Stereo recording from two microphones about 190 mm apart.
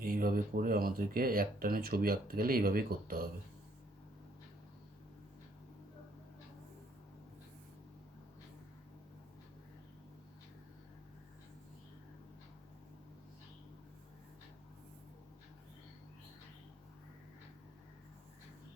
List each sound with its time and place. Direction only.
0.0 s speech: 50° right (ahead or behind)